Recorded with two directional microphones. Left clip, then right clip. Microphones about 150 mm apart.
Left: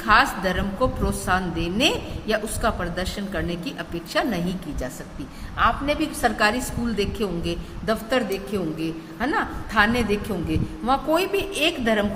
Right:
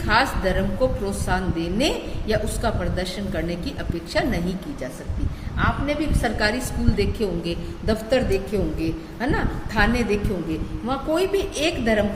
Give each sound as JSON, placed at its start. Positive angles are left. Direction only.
{"t": 0.1, "sound": "a woman's voice", "side_deg": 35}
{"t": 5.5, "sound": "a woman's voice", "side_deg": 45}
{"t": 6.4, "sound": "a woman's voice", "side_deg": 30}
{"t": 11.6, "sound": "a woman's voice", "side_deg": 20}